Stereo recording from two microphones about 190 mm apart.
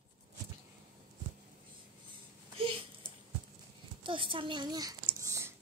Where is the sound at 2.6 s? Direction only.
30° right (ahead or behind).